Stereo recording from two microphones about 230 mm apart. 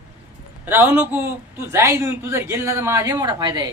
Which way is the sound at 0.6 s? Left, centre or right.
Centre.